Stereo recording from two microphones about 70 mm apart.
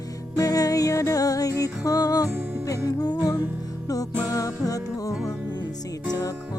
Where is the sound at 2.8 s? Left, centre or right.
Left.